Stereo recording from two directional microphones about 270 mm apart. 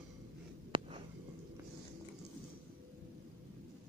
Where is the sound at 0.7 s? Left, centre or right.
Centre.